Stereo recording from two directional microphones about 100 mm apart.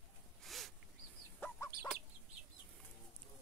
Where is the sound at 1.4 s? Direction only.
30° left (ahead or behind).